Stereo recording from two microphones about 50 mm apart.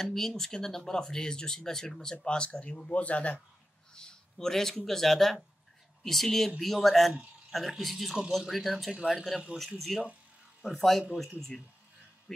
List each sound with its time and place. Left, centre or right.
0.0 s speech: centre; by 3.3 s left
3.9 s speech: centre